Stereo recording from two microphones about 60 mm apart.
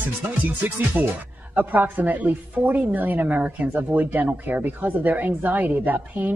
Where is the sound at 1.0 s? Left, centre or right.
Right.